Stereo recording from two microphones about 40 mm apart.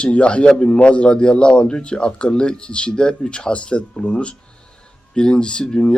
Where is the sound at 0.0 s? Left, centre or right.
Left.